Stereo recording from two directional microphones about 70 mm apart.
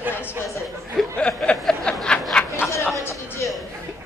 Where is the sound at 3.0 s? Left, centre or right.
Left.